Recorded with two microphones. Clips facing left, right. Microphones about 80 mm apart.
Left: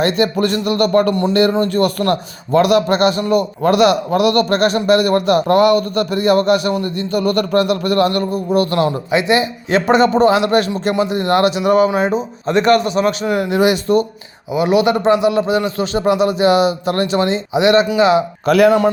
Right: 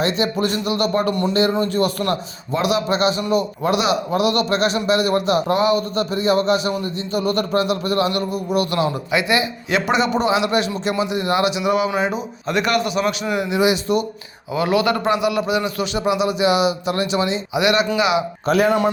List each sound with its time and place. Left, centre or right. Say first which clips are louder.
0.0 s a man's voice: left 4 dB; left
8.3 s a man's voice: left 5 dB; left
14.5 s a man's voice: left 4 dB; left
17.5 s a man's voice: left 6 dB; left
18.4 s a man's voice: left 6 dB; left